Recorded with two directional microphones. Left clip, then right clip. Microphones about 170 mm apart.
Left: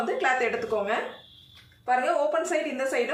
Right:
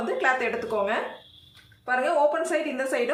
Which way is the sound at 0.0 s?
25° right (ahead or behind).